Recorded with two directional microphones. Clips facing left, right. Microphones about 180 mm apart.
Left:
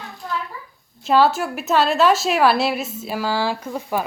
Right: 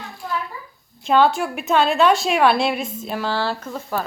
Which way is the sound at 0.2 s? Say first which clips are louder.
Right 1 dB; 10° right (ahead or behind).